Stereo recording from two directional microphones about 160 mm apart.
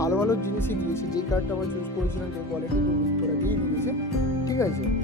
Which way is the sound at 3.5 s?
15° left (ahead or behind).